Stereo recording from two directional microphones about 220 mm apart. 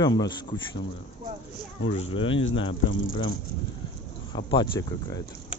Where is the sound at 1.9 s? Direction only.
25° left (ahead or behind).